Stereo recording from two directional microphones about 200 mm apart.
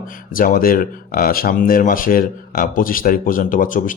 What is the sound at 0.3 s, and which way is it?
Speech, 45° left (ahead or behind).